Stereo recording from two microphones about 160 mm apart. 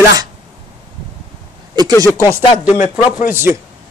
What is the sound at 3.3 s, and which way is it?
Speech, 15° right (ahead or behind).